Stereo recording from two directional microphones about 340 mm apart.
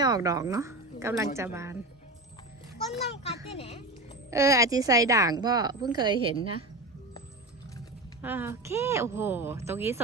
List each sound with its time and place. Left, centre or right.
0.0 s a woman's voice: centre
3.5 s a child's voice: centre
4.3 s a woman's voice: centre
8.2 s a woman's voice: centre